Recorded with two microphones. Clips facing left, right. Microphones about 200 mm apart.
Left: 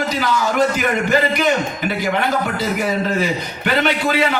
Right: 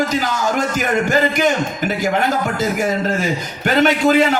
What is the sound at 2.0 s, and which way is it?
A man's voice, 45° right (ahead or behind).